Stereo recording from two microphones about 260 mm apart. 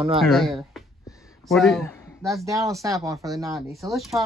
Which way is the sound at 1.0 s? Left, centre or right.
Centre.